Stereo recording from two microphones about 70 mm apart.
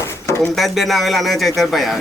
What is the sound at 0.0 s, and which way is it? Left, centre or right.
Drawer open or close, left.